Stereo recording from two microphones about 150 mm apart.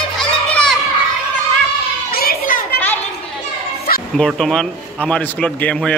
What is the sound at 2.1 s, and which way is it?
Children playing, 90° left.